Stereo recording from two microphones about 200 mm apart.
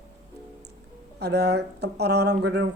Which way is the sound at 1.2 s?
55° right (ahead or behind).